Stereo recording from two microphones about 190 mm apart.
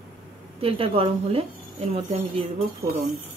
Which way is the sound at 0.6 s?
30° right (ahead or behind).